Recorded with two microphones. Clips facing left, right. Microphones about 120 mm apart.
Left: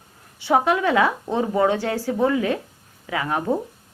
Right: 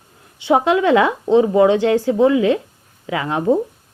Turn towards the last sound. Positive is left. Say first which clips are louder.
# right 6 dB
turn(degrees=-25)  # may be behind; listen again after turning